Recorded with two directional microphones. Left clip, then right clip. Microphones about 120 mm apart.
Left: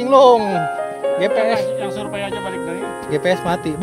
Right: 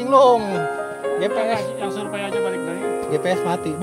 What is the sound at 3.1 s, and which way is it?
Speech, 85° left.